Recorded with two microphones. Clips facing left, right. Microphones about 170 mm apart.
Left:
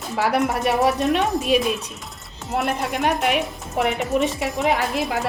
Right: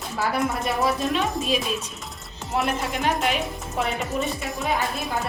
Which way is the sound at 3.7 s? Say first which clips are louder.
Left 6 dB; 65° left (ahead or behind).